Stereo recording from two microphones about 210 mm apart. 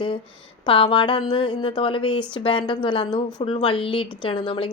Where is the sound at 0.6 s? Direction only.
25° left (ahead or behind).